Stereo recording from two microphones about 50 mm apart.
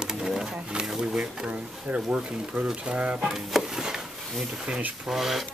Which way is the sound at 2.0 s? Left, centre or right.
Centre.